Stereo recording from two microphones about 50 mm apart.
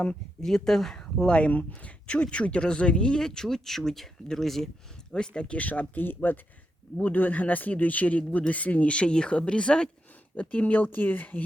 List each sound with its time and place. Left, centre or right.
0.4 s speech: centre
1.3 s speech: left; by 4.7 s centre
5.1 s speech: centre
10.3 s speech: left